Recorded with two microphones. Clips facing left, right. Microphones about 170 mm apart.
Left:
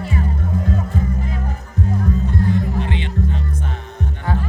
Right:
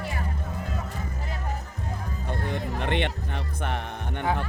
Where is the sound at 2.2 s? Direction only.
60° right (ahead or behind).